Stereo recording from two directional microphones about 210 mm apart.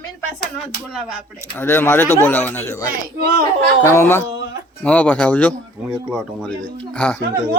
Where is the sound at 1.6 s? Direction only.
10° left (ahead or behind).